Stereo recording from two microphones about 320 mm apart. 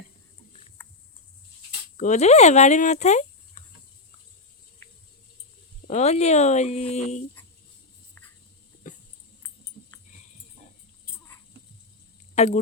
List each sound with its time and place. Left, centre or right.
2.0 s speech: left
5.9 s speech: left
8.9 s a sound: left
12.3 s speech: left